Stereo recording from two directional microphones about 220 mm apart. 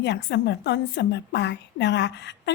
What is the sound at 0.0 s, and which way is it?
A woman's voice, 55° left (ahead or behind).